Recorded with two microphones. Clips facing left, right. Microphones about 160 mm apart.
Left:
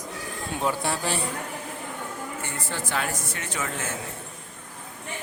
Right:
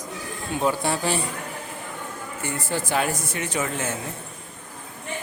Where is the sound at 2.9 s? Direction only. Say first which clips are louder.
Right 5 dB; 15° right (ahead or behind).